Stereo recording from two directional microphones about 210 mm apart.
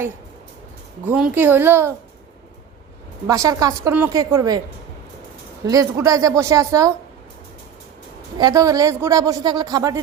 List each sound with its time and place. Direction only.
1.0 s a woman's voice: 5° right (ahead or behind)
3.2 s a woman's voice: 15° right (ahead or behind)
5.6 s a woman's voice: 15° right (ahead or behind)
8.4 s a woman's voice: 15° right (ahead or behind)